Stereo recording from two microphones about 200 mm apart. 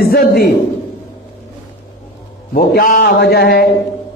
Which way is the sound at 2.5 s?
45° left (ahead or behind).